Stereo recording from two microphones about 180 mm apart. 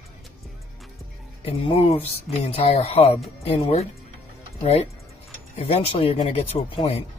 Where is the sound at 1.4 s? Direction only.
35° left (ahead or behind).